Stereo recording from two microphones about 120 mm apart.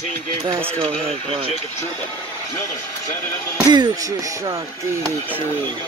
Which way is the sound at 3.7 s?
35° right (ahead or behind).